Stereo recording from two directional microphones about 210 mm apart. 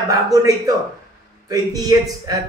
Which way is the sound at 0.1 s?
15° right (ahead or behind).